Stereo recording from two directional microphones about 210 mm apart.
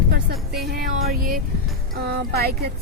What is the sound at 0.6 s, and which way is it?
A woman's voice, 45° right (ahead or behind).